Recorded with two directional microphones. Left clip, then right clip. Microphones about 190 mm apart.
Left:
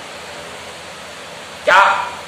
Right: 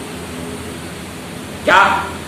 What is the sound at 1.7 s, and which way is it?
Speech, centre (ahead or behind).